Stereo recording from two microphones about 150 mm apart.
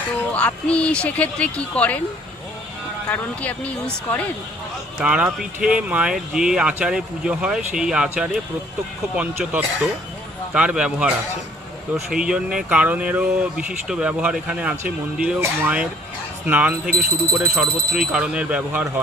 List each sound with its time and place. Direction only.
0.3 s speech: 10° left (ahead or behind)
3.1 s speech: 10° left (ahead or behind)
5.0 s speech: 10° right (ahead or behind)